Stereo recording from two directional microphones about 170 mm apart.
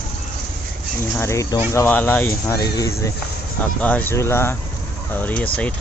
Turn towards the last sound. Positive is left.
turn(degrees=10)  # may be behind; listen again after turning